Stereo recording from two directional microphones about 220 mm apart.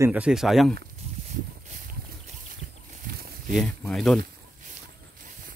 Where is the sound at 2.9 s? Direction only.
45° right (ahead or behind).